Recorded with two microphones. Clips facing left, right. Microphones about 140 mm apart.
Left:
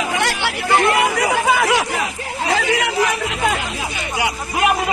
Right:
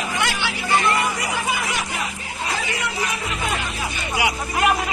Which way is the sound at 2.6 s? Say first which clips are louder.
Left 8 dB; 85° left.